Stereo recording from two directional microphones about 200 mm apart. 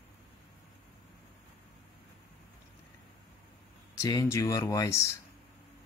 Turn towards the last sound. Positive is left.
turn(degrees=15)  # may be behind; listen again after turning